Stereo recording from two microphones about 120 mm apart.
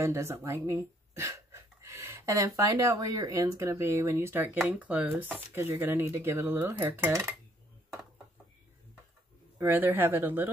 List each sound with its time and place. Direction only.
0.0 s speech: 25° right (ahead or behind)
9.6 s speech: 15° right (ahead or behind)